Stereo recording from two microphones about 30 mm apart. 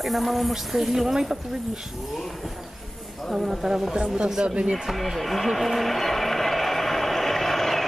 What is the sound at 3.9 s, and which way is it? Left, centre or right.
Speech, right.